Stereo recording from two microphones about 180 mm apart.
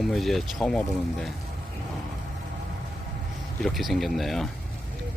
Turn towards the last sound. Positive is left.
turn(degrees=0)  # may be behind; listen again after turning